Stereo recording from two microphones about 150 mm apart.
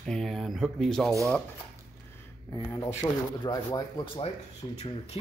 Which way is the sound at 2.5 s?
20° left (ahead or behind).